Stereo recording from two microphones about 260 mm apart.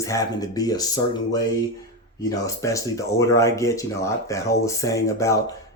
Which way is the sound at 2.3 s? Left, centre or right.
Centre.